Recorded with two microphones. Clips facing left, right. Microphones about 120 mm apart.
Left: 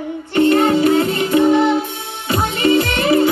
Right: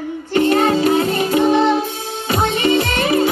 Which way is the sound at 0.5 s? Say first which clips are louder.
Left 1 dB; 25° right (ahead or behind).